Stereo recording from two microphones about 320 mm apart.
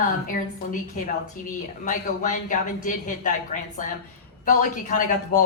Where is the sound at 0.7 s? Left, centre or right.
Left.